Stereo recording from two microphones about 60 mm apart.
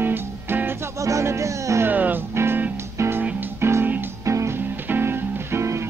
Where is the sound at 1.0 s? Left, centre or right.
Right.